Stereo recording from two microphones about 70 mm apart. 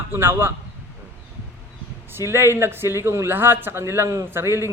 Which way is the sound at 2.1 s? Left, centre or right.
Right.